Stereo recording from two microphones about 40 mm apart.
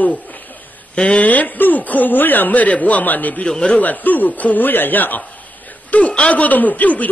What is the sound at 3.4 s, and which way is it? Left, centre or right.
Speech, left.